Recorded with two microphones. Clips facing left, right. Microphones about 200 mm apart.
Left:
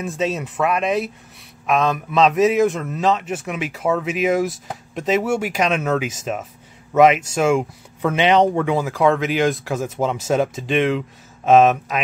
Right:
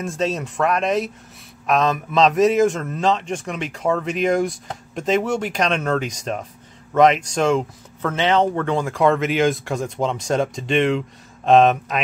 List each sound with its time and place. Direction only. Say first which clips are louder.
0.0 s speech: even; centre (ahead or behind)